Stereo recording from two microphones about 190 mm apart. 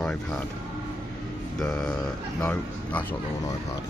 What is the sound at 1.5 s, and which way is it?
Speech, centre (ahead or behind).